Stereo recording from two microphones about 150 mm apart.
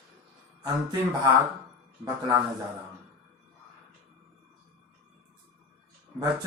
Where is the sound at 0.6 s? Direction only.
25° right (ahead or behind).